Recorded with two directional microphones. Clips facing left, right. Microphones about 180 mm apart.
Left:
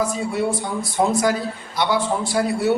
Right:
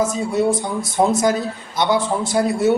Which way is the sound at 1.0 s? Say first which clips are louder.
Right 2 dB; 25° right (ahead or behind).